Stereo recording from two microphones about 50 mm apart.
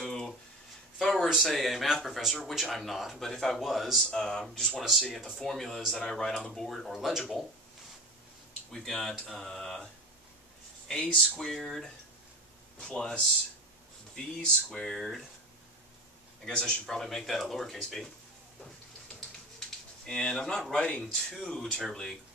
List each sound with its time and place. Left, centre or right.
0.0 s a sound: centre
1.0 s speech: centre
3.5 s speech: centre
4.1 s speech: centre
4.8 s speech: centre
8.7 s speech: centre
10.9 s speech: centre
16.4 s speech: centre
20.1 s speech: centre